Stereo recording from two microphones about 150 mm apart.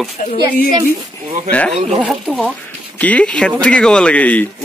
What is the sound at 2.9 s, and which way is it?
Speech, 10° left (ahead or behind).